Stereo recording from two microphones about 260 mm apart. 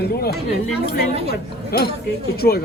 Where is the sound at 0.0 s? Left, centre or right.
Left.